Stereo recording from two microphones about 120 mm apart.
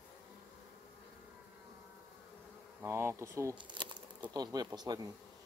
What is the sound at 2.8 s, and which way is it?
Speech, 20° right (ahead or behind).